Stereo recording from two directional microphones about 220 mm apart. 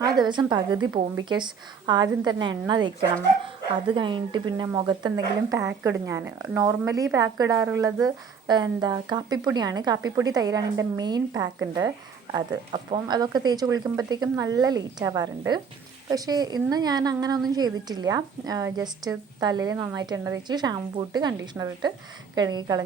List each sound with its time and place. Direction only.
0.2 s a woman's voice: 20° right (ahead or behind)
3.8 s speech: 20° right (ahead or behind)